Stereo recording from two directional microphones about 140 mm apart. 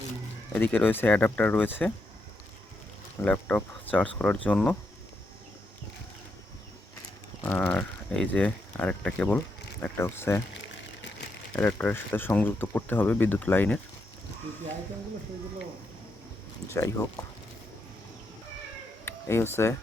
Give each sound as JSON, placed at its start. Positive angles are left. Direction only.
{"t": 0.5, "sound": "speech", "side_deg": 15}
{"t": 3.2, "sound": "speech", "side_deg": 10}
{"t": 7.4, "sound": "speech", "side_deg": 15}
{"t": 11.6, "sound": "speech", "side_deg": 15}
{"t": 16.7, "sound": "speech", "side_deg": 20}
{"t": 19.0, "sound": "speech", "side_deg": 15}